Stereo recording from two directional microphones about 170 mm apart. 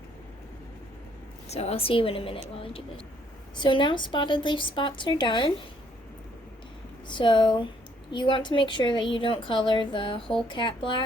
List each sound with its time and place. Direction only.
1.5 s a woman's voice: 40° left (ahead or behind)
3.5 s a woman's voice: 30° left (ahead or behind)
7.1 s a woman's voice: 30° left (ahead or behind)